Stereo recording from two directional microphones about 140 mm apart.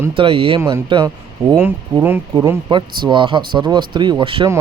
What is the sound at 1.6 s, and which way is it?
Speech, 15° right (ahead or behind).